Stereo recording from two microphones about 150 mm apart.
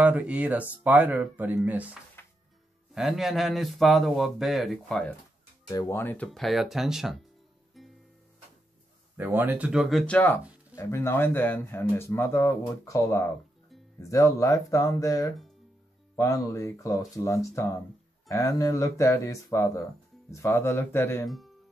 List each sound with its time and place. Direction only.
0.0 s speech: 10° right (ahead or behind)
2.2 s music: 15° left (ahead or behind)
2.9 s a man's voice: 5° right (ahead or behind)
5.7 s speech: 25° left (ahead or behind)
5.9 s a man's voice: 10° left (ahead or behind)
9.1 s a man's voice: 15° right (ahead or behind); by 21.3 s 15° left (ahead or behind)
21.3 s music: centre (ahead or behind)